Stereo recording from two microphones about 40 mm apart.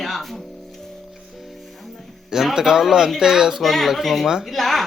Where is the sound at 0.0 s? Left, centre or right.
Centre.